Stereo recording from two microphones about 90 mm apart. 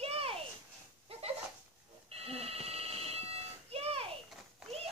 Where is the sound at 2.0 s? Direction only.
90° right.